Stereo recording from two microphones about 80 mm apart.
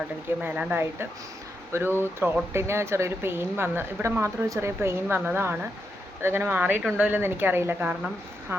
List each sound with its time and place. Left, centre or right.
0.3 s a woman's voice: right